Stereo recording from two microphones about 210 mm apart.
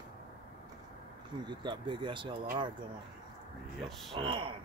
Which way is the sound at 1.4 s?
20° right (ahead or behind).